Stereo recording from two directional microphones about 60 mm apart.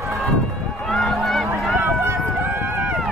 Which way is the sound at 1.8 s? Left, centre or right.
Right.